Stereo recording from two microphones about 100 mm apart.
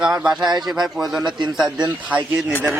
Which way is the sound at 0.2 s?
5° right (ahead or behind).